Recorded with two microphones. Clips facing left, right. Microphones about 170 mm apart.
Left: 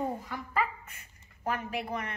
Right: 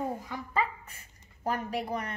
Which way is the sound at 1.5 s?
35° right (ahead or behind).